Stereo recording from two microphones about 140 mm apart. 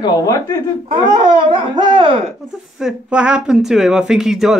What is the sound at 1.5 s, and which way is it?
Speech, 35° right (ahead or behind).